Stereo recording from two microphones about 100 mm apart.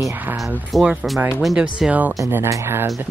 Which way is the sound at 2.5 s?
25° right (ahead or behind).